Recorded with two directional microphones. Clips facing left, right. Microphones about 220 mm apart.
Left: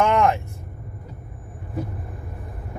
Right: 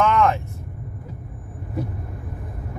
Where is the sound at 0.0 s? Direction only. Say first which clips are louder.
Even; 15° left (ahead or behind).